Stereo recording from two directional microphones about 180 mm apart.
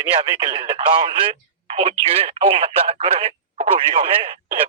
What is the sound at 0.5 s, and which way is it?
Speech, 30° right (ahead or behind).